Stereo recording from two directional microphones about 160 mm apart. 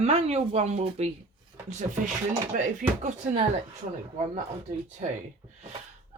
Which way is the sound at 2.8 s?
55° right (ahead or behind).